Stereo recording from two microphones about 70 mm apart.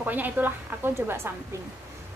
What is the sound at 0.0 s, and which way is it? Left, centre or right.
A woman's voice, right.